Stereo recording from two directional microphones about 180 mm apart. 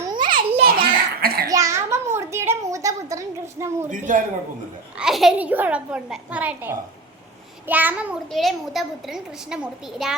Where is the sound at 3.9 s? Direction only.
45° right (ahead or behind).